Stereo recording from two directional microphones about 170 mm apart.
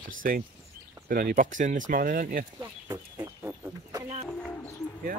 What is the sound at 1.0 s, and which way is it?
Speech, 60° right (ahead or behind).